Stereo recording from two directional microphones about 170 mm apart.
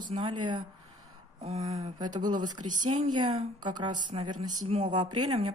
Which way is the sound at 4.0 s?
45° right (ahead or behind).